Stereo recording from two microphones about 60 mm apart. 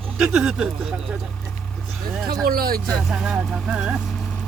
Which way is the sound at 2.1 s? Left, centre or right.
Centre.